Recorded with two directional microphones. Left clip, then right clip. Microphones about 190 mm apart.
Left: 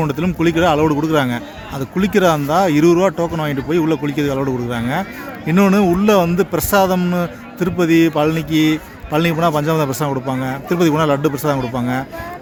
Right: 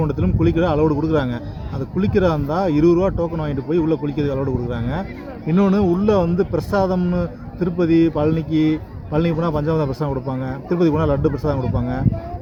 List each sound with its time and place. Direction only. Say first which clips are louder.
0.0 s a man's voice: left 3 dB; 20° left (ahead or behind)